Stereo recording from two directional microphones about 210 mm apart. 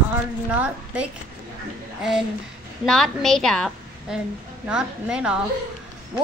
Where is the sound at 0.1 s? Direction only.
5° right (ahead or behind).